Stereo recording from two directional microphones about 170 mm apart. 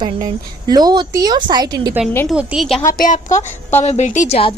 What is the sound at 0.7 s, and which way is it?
Speech, 25° right (ahead or behind).